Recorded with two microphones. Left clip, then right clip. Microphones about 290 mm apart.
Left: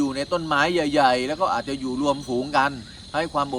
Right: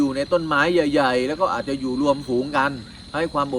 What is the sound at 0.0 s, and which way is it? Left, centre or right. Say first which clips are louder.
Speech: right 4 dB; centre.